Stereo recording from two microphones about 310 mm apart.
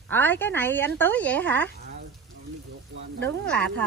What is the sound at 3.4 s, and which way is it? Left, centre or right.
Speech, centre.